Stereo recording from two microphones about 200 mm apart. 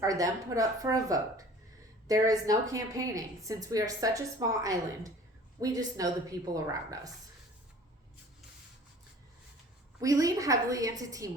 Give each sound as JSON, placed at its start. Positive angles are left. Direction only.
{"t": 0.0, "sound": "a woman's voice", "side_deg": -15}
{"t": 10.0, "sound": "a woman's voice", "side_deg": -15}